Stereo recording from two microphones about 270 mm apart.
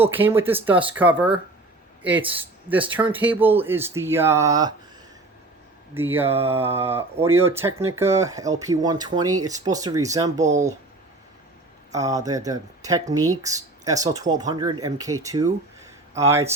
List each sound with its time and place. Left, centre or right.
0.0 s speech: centre
5.9 s speech: centre
10.4 s speech: right
11.9 s speech: centre